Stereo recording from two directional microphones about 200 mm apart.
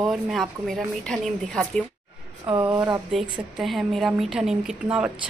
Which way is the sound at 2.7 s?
20° right (ahead or behind).